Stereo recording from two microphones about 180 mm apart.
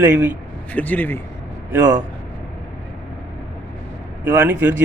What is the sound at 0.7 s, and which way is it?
Speech, 10° left (ahead or behind).